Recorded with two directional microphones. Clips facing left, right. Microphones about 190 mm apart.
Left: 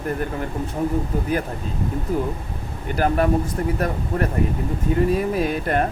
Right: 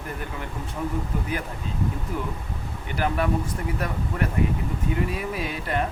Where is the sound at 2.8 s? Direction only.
45° left (ahead or behind).